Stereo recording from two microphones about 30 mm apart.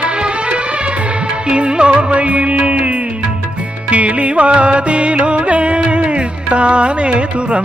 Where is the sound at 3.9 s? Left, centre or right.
Right.